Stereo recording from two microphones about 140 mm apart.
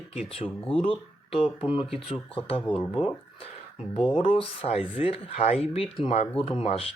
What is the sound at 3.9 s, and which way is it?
Speech, 40° left (ahead or behind).